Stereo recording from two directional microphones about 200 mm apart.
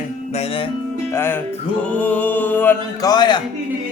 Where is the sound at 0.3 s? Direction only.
25° left (ahead or behind).